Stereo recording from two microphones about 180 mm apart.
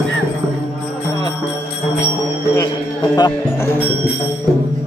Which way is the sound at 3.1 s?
20° left (ahead or behind).